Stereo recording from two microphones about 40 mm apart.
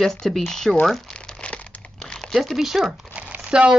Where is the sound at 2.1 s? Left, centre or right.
Centre.